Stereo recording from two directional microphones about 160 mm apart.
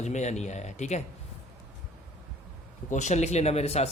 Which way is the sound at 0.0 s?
45° left (ahead or behind).